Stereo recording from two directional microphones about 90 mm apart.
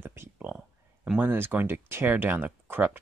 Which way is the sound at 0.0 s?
25° right (ahead or behind).